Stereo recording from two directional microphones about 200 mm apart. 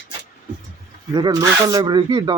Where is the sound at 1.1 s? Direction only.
20° right (ahead or behind).